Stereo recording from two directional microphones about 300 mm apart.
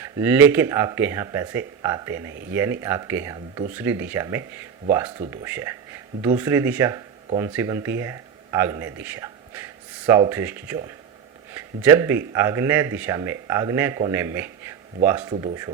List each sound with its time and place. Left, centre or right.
0.0 s speech: centre
15.2 s speech: centre